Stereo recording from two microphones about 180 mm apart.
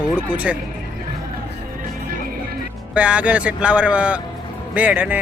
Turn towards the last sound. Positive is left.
turn(degrees=-10)  # may be behind; listen again after turning